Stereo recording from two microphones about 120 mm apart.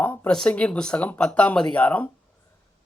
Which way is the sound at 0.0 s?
20° left (ahead or behind).